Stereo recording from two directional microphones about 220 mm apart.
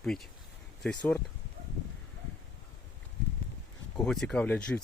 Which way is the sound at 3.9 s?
Centre (ahead or behind).